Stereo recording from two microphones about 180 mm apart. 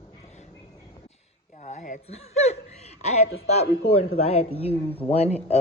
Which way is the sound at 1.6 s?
45° left (ahead or behind).